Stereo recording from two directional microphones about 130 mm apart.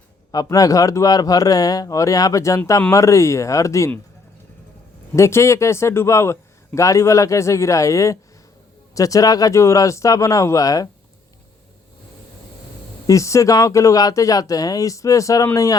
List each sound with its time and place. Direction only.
0.3 s a man's voice: 30° left (ahead or behind)
5.1 s a man's voice: 20° left (ahead or behind)
13.1 s a man's voice: 25° left (ahead or behind)